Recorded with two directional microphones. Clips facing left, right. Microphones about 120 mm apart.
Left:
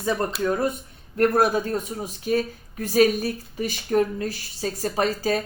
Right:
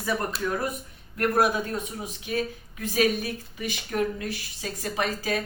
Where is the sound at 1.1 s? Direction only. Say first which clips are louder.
Left 4 dB; 30° left (ahead or behind).